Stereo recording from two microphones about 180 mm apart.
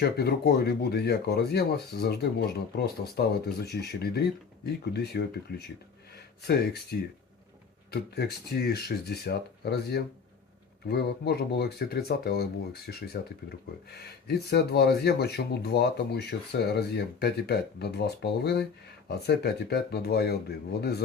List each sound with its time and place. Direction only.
0.0 s speech: 65° left (ahead or behind)
6.9 s speech: 55° left (ahead or behind)
14.3 s speech: 65° left (ahead or behind)